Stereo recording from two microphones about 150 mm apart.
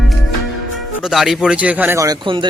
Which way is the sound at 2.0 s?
30° right (ahead or behind).